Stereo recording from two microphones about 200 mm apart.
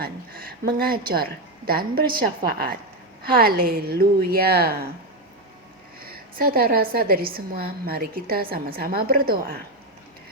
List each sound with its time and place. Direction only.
0.0 s a woman's voice: 50° right (ahead or behind)
6.1 s a woman's voice: 50° right (ahead or behind)